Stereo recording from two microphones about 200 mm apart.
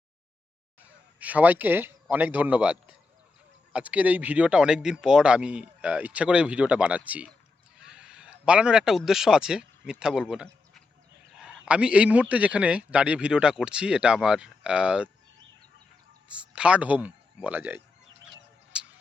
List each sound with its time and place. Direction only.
0.8 s a man's voice: 5° right (ahead or behind)
16.3 s a man's voice: 5° right (ahead or behind)
18.3 s bird: 5° right (ahead or behind)